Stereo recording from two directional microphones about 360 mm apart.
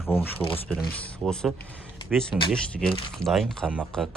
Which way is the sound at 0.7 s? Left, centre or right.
Centre.